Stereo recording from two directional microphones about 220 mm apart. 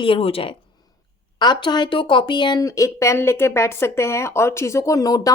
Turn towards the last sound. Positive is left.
turn(degrees=15)  # may be behind; listen again after turning